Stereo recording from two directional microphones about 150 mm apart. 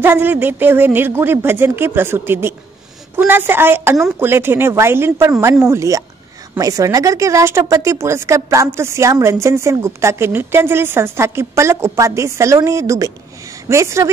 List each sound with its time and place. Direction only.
0.0 s a woman's voice: 15° right (ahead or behind)